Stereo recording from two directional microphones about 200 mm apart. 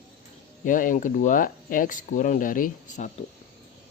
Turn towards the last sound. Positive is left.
turn(degrees=45)  # may be behind; listen again after turning